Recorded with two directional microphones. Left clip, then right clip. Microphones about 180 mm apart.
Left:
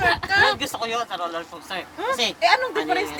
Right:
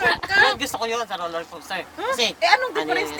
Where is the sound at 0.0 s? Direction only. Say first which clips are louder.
Right 1 dB; 5° right (ahead or behind).